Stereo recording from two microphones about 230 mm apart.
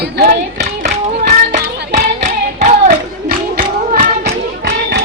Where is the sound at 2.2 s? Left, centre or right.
Right.